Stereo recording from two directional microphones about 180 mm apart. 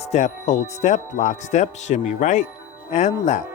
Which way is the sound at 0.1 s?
40° left (ahead or behind).